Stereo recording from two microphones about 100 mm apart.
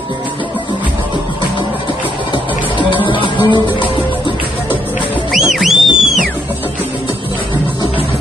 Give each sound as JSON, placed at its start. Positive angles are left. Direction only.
{"t": 2.3, "sound": "music", "side_deg": 55}
{"t": 5.3, "sound": "music", "side_deg": 0}